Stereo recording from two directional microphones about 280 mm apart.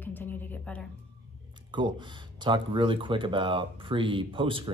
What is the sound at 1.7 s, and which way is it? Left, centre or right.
Speech, centre.